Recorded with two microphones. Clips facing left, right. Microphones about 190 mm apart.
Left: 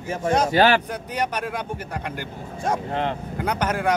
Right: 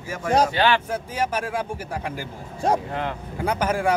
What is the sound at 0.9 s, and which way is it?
Speech, 5° right (ahead or behind).